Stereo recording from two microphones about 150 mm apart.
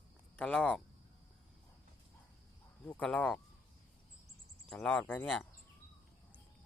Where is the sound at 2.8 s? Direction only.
10° left (ahead or behind).